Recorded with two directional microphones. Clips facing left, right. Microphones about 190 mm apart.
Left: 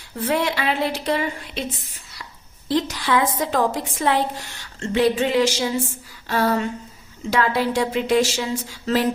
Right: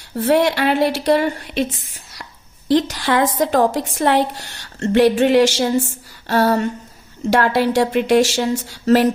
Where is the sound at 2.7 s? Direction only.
75° right (ahead or behind).